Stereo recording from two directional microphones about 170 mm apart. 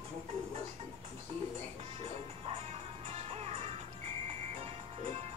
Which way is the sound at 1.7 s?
35° right (ahead or behind).